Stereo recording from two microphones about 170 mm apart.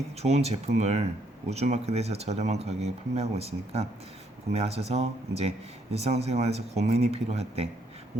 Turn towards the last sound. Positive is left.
turn(degrees=-40)  # may be behind; listen again after turning